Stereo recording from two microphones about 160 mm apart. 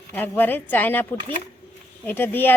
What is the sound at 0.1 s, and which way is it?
Speech, 10° left (ahead or behind).